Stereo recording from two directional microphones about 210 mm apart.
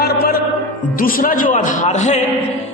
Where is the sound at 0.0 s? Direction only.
50° left (ahead or behind).